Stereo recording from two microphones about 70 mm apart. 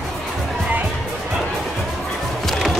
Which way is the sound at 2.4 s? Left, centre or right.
Centre.